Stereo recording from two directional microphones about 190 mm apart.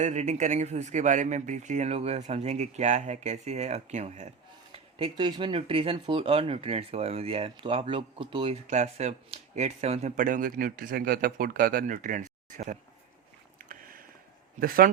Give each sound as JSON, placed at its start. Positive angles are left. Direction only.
{"t": 0.0, "sound": "speech", "side_deg": -40}
{"t": 8.6, "sound": "speech", "side_deg": -40}
{"t": 13.6, "sound": "a sound", "side_deg": -45}
{"t": 14.6, "sound": "speech", "side_deg": -50}